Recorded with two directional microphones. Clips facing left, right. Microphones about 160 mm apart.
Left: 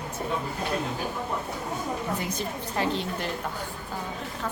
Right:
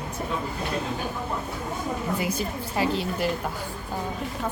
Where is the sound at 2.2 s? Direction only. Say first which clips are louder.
Right 3 dB; 10° right (ahead or behind).